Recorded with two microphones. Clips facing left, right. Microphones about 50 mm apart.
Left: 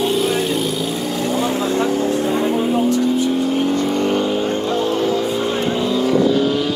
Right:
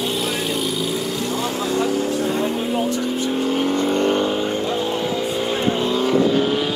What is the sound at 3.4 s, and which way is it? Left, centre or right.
Vehicle, right.